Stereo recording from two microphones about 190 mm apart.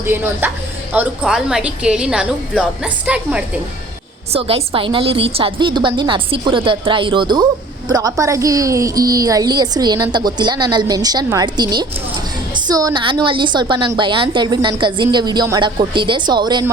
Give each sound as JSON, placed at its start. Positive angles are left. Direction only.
{"t": 0.0, "sound": "a woman's voice", "side_deg": -10}
{"t": 4.3, "sound": "a woman's voice", "side_deg": -30}